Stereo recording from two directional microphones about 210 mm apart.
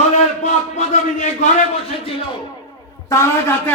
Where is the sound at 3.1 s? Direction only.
15° left (ahead or behind).